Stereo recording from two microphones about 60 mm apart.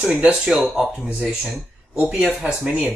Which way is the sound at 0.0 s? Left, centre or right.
Right.